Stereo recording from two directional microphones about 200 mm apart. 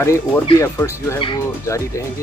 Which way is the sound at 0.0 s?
15° left (ahead or behind).